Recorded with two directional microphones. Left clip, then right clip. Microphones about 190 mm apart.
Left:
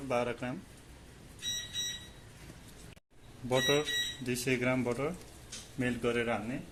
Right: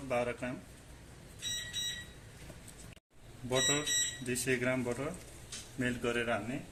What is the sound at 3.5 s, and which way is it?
Speech, 35° left (ahead or behind).